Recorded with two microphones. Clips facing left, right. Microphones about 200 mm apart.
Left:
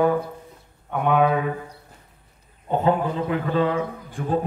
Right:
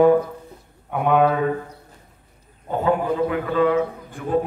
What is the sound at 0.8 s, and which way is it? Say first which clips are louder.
Speech: right 2 dB; centre (ahead or behind).